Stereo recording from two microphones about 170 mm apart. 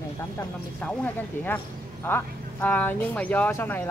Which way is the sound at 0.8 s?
10° left (ahead or behind).